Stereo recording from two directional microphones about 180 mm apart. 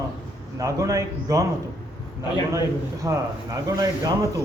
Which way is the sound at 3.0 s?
20° right (ahead or behind).